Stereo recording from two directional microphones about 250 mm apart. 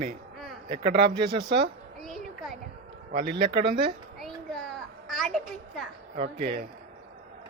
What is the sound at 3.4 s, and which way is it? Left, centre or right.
Speech, right.